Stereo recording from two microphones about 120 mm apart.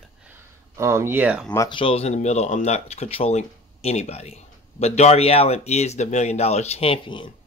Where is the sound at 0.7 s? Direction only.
25° right (ahead or behind).